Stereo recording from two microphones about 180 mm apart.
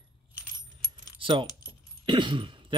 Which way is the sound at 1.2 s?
30° right (ahead or behind).